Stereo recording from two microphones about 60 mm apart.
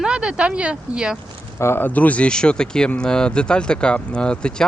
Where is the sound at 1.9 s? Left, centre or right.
Left.